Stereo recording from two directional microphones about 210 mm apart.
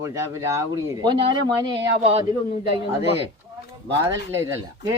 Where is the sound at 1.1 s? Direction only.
25° right (ahead or behind).